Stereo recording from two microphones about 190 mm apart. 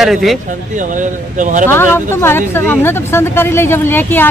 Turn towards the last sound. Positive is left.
turn(degrees=10)  # may be behind; listen again after turning